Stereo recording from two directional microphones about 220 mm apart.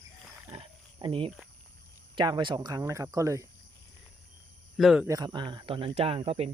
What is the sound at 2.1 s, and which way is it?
Speech, 20° right (ahead or behind).